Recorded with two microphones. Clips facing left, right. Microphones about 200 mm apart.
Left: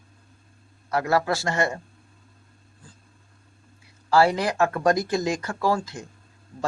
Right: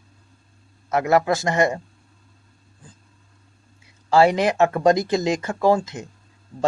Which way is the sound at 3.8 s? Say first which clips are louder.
Right 3 dB; 20° right (ahead or behind).